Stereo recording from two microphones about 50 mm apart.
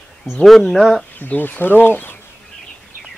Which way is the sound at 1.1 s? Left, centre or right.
Left.